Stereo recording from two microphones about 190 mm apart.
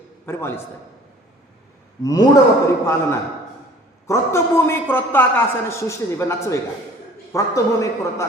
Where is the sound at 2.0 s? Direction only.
20° left (ahead or behind).